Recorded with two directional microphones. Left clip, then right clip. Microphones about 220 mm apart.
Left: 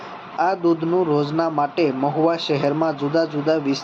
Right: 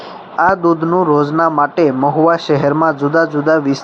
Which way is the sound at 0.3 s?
30° right (ahead or behind).